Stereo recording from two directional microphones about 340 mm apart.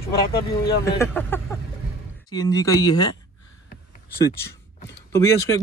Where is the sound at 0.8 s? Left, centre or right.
Centre.